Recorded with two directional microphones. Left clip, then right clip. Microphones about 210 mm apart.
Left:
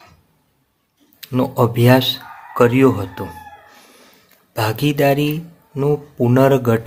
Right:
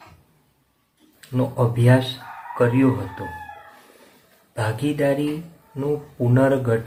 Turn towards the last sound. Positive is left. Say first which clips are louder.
# left 5 dB
turn(degrees=50)  # may be behind; listen again after turning